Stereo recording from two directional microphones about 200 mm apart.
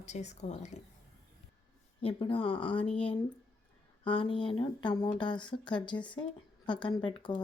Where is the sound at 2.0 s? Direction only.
25° left (ahead or behind).